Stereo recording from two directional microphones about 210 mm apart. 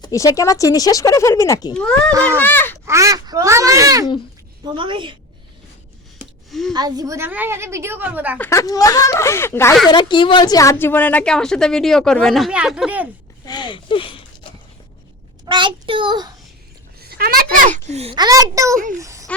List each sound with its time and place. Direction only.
0.0 s speech: 15° left (ahead or behind)
1.7 s a woman's voice: 5° left (ahead or behind)
2.8 s a woman's voice: 15° right (ahead or behind)
6.5 s a woman's voice: centre (ahead or behind)
6.7 s a woman's voice: 20° right (ahead or behind)
8.4 s a woman's voice: 15° left (ahead or behind); by 13.1 s 5° right (ahead or behind)
13.4 s speech: 20° left (ahead or behind)
15.4 s a child's voice: 25° right (ahead or behind)
17.0 s a child's voice: 45° right (ahead or behind); by 18.8 s 15° right (ahead or behind)
18.9 s a sound: 15° right (ahead or behind)